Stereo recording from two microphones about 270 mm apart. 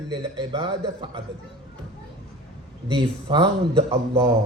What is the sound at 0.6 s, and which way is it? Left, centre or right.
Speech, centre.